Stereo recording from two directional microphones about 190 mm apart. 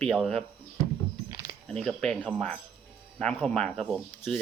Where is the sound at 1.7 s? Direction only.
5° left (ahead or behind).